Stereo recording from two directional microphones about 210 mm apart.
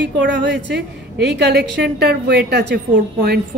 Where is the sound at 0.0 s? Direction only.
55° right (ahead or behind).